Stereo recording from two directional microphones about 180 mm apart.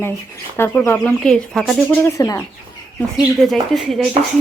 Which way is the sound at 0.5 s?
15° left (ahead or behind).